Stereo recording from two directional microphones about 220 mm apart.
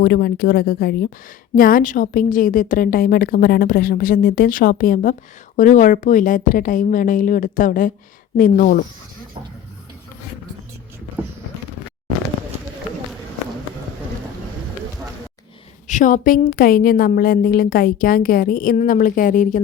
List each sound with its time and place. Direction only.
0.0 s a woman's voice: 45° left (ahead or behind)
15.9 s a woman's voice: 35° left (ahead or behind)